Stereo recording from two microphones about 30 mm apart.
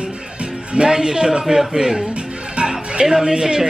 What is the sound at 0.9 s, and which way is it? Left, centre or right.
Speech, right.